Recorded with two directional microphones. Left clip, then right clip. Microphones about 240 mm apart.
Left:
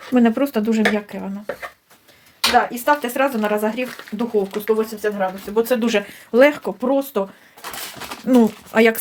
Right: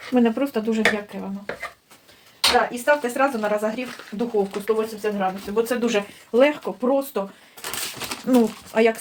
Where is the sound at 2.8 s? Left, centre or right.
Left.